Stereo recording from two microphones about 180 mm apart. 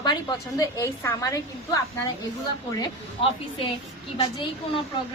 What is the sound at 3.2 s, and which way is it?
Speech, 30° left (ahead or behind).